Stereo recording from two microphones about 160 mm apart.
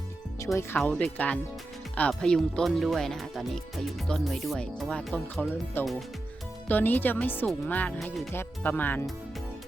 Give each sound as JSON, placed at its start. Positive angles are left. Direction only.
{"t": 0.3, "sound": "speech", "side_deg": 20}
{"t": 0.8, "sound": "speech", "side_deg": 10}
{"t": 8.3, "sound": "speech", "side_deg": 15}